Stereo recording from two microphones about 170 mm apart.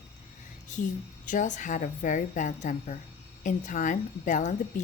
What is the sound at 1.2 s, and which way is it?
A woman's voice, 50° left (ahead or behind).